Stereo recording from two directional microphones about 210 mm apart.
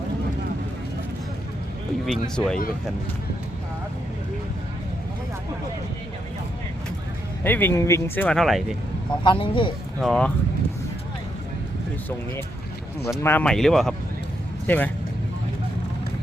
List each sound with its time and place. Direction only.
2.0 s speech: 5° left (ahead or behind)
7.4 s speech: 10° left (ahead or behind)
9.2 s speech: 25° left (ahead or behind)
10.0 s speech: 5° left (ahead or behind)
13.2 s speech: 5° left (ahead or behind)